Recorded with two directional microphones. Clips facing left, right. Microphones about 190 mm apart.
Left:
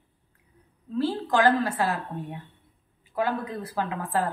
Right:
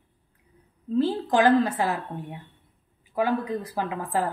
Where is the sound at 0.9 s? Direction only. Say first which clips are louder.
Right 2 dB; 20° right (ahead or behind).